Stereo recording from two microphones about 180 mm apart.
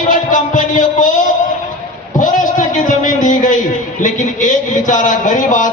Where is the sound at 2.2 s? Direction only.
45° left (ahead or behind).